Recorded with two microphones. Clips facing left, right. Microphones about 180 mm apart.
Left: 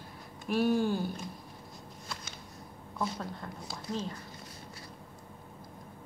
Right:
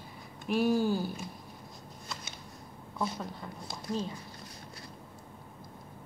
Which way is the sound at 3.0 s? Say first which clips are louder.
Even; 5° right (ahead or behind).